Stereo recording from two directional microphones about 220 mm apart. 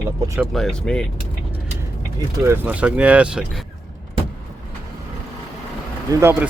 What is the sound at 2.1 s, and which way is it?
Speech, 10° right (ahead or behind).